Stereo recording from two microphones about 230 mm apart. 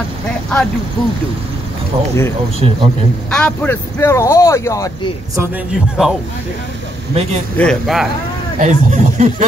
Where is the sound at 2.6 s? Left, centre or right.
Right.